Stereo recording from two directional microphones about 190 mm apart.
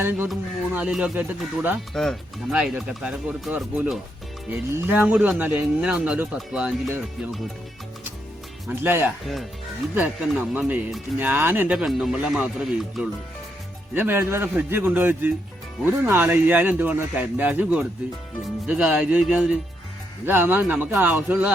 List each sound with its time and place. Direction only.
0.3 s speech: 5° right (ahead or behind)
8.6 s speech: 10° right (ahead or behind)
9.2 s speech: centre (ahead or behind)
10.5 s speech: 10° right (ahead or behind)